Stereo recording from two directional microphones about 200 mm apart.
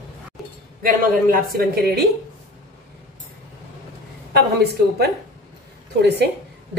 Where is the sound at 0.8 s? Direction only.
50° right (ahead or behind).